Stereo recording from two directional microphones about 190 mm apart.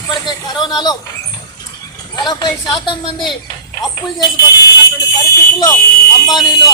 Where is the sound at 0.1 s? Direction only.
20° left (ahead or behind).